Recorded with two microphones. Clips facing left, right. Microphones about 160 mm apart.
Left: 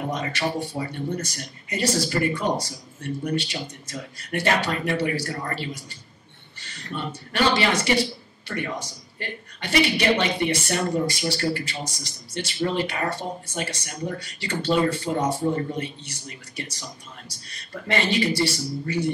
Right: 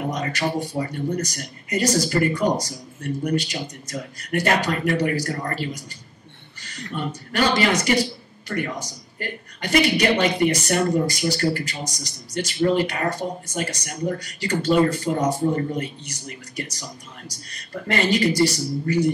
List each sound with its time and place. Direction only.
0.1 s a woman's voice: 40° right (ahead or behind)